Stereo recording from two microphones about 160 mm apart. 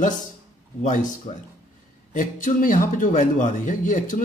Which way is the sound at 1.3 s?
35° left (ahead or behind).